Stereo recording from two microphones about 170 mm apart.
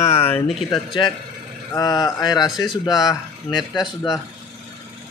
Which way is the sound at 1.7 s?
20° left (ahead or behind).